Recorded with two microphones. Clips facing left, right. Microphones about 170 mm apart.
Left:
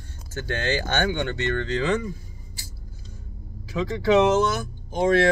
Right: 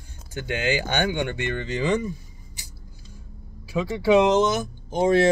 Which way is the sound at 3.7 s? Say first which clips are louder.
Right 1 dB; 10° right (ahead or behind).